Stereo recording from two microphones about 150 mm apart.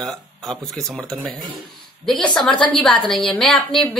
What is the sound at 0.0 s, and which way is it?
A woman's voice, 5° left (ahead or behind).